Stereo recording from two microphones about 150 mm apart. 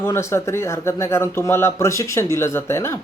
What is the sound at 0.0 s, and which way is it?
Speech, 20° left (ahead or behind).